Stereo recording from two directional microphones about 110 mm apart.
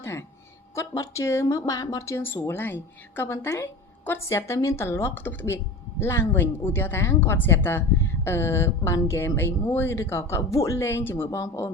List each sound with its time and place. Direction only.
0.0 s a woman's voice: 25° left (ahead or behind)